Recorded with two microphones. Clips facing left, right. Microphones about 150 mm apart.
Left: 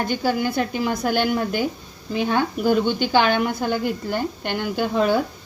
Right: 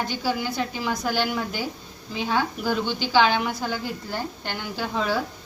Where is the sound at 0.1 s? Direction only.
50° left (ahead or behind).